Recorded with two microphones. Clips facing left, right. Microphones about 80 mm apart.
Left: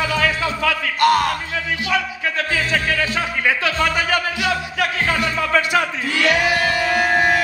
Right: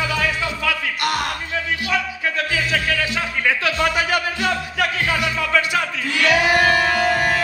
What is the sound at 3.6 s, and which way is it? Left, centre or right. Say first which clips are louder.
Speech: even; left.